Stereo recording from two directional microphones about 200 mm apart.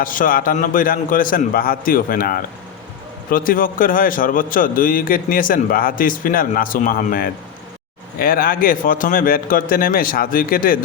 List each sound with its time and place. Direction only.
0.0 s a man's voice: 45° left (ahead or behind)